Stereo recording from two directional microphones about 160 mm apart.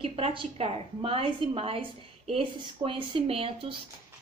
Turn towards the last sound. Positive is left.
turn(degrees=-35)  # may be behind; listen again after turning